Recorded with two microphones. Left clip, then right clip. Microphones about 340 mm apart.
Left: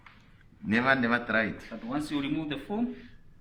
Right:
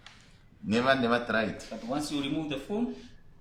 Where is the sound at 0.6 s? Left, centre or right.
Centre.